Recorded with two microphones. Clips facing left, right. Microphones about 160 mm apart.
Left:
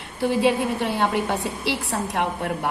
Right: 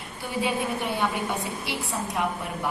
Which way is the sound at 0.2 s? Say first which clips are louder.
Left 8 dB; 75° left (ahead or behind).